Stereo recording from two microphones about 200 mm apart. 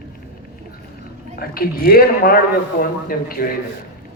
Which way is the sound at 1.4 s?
50° left (ahead or behind).